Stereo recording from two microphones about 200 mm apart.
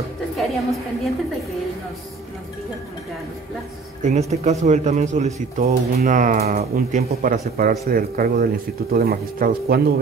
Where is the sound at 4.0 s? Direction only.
35° right (ahead or behind).